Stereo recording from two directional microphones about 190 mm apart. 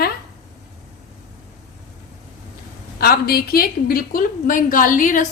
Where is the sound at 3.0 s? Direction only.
50° left (ahead or behind).